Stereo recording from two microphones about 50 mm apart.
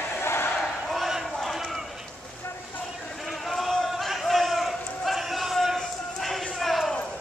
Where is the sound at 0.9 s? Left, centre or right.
Centre.